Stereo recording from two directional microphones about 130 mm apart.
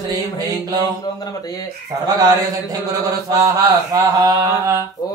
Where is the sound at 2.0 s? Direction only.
30° right (ahead or behind).